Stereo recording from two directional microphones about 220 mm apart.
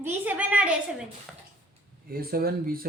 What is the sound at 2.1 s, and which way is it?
Speech, 40° right (ahead or behind).